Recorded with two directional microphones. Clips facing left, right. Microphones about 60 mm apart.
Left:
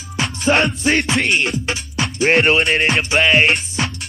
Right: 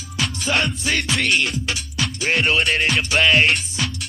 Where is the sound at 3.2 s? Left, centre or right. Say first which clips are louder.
Left 2 dB; centre.